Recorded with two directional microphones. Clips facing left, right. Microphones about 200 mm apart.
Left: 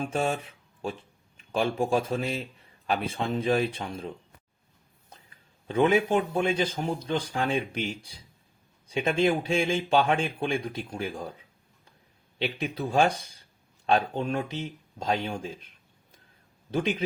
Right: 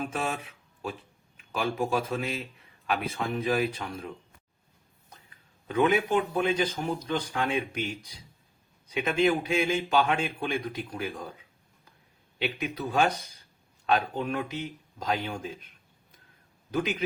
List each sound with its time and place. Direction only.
0.0 s speech: 30° left (ahead or behind)
5.6 s speech: 25° left (ahead or behind)
12.4 s speech: 30° left (ahead or behind)
16.7 s speech: 30° left (ahead or behind)